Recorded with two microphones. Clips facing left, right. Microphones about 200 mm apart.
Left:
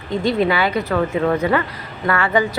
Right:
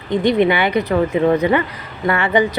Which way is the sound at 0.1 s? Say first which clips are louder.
Right 3 dB; 20° right (ahead or behind).